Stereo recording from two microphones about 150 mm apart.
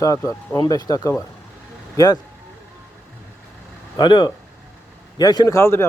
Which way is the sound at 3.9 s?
30° left (ahead or behind).